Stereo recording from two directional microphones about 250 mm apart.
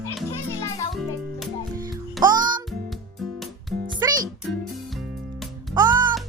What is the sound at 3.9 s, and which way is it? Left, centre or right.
Music, centre.